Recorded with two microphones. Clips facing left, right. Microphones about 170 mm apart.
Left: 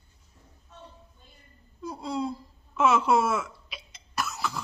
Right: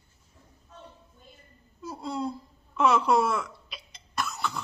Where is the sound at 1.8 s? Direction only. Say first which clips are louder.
Left 1 dB; centre (ahead or behind).